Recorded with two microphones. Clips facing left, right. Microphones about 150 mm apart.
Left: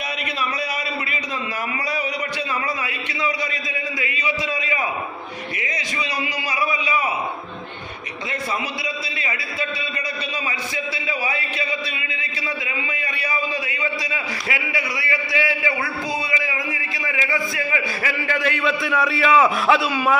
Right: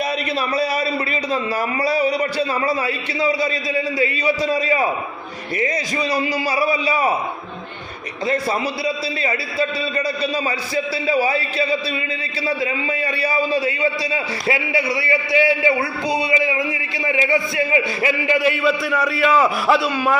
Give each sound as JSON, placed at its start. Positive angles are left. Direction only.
{"t": 1.8, "sound": "a man's voice", "side_deg": -35}
{"t": 8.3, "sound": "a man's voice", "side_deg": -35}
{"t": 10.9, "sound": "a man's voice", "side_deg": -35}